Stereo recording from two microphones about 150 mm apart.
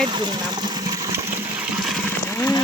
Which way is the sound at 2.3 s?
15° left (ahead or behind).